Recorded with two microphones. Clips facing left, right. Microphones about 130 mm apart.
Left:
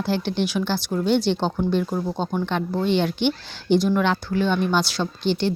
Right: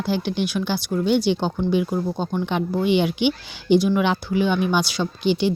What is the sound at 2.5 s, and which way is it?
Speech, 10° right (ahead or behind).